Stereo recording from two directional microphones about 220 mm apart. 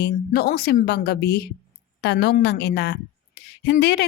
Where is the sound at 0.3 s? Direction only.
45° left (ahead or behind).